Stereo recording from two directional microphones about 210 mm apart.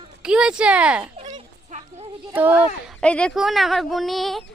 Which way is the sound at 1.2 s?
35° right (ahead or behind).